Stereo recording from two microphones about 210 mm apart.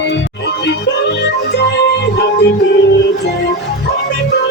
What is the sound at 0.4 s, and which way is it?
Music, 55° left (ahead or behind).